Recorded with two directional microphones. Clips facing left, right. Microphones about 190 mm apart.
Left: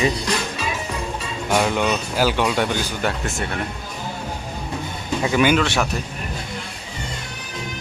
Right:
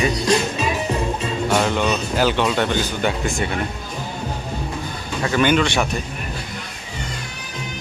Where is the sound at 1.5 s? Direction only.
10° left (ahead or behind).